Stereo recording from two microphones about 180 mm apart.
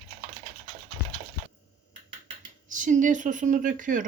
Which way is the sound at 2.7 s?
45° right (ahead or behind).